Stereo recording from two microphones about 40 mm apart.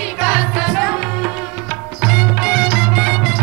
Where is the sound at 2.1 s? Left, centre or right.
Centre.